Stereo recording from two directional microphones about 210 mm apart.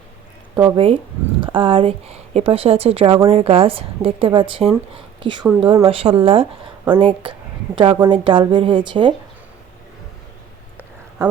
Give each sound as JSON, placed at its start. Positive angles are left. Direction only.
{"t": 0.5, "sound": "a woman's voice", "side_deg": -20}
{"t": 11.2, "sound": "speech", "side_deg": -15}